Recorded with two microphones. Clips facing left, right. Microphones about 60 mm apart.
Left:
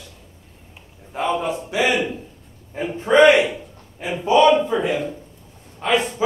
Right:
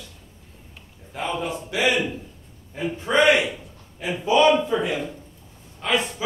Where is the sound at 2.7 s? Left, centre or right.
Left.